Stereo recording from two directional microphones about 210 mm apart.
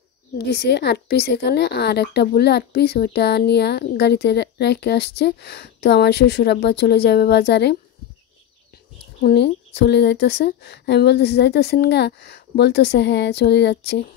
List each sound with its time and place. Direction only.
0.5 s a woman's voice: 50° left (ahead or behind)
9.2 s a woman's voice: 55° left (ahead or behind)